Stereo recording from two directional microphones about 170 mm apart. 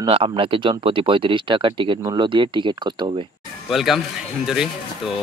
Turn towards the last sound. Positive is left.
turn(degrees=-5)  # may be behind; listen again after turning